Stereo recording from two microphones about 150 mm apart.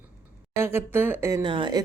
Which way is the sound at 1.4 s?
35° right (ahead or behind).